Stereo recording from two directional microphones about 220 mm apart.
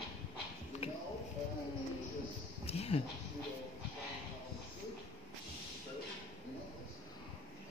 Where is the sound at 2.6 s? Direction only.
25° left (ahead or behind).